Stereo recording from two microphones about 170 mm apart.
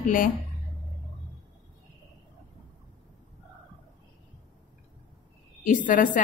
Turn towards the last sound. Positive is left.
turn(degrees=50)  # may be behind; listen again after turning